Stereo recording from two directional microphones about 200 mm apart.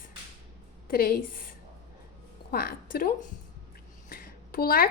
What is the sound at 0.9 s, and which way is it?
Speech, 50° left (ahead or behind).